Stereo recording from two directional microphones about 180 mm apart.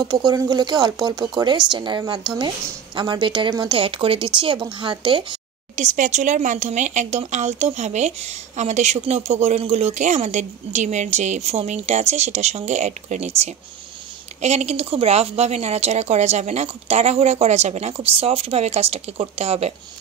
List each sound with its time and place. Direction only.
0.0 s speech: 20° right (ahead or behind)
5.8 s speech: 45° right (ahead or behind)
14.4 s speech: 35° right (ahead or behind)